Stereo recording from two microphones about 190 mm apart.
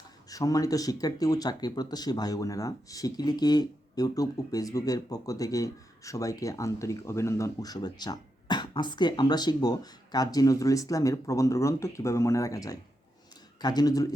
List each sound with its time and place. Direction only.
0.3 s speech: 20° left (ahead or behind)